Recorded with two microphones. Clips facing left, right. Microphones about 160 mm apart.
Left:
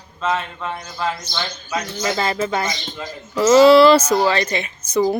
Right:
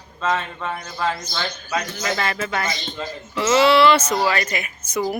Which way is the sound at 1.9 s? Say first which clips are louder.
Left 3 dB; 30° left (ahead or behind).